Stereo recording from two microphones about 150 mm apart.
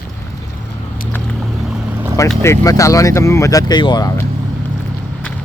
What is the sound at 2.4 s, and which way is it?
Speech, 20° left (ahead or behind).